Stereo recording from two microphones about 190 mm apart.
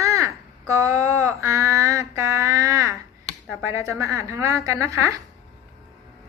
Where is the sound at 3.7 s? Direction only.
15° right (ahead or behind).